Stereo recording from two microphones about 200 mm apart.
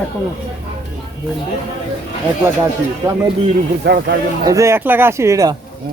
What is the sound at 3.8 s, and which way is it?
Speech, 55° right (ahead or behind).